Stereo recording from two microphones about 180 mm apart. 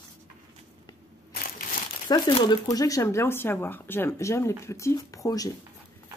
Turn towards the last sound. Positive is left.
turn(degrees=20)  # may be behind; listen again after turning